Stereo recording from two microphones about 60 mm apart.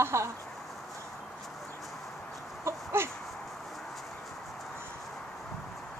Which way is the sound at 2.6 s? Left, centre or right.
Right.